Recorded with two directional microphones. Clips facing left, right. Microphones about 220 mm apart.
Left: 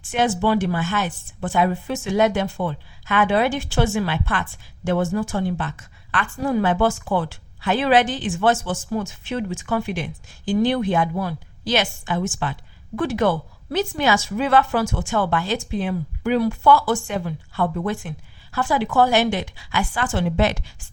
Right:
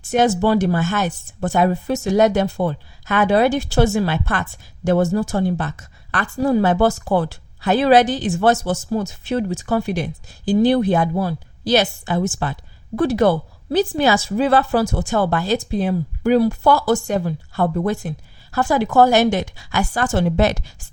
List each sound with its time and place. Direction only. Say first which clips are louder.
0.0 s speech: right 4 dB; 40° right (ahead or behind)